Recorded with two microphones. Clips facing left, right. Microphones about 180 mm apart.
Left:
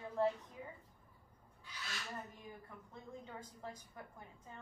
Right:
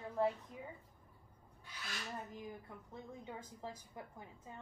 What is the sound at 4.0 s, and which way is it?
Speech, 20° right (ahead or behind).